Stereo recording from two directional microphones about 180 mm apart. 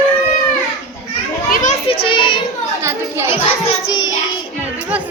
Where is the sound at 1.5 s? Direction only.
45° left (ahead or behind).